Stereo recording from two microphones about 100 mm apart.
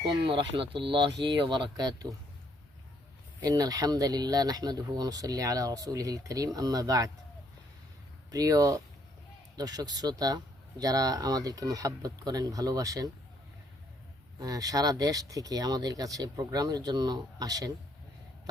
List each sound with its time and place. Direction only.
0.0 s speech: 55° right (ahead or behind)
3.4 s speech: 40° right (ahead or behind)
8.3 s speech: 40° right (ahead or behind)
14.3 s speech: 40° right (ahead or behind)